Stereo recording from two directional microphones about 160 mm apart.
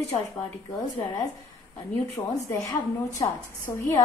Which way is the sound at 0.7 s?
20° left (ahead or behind).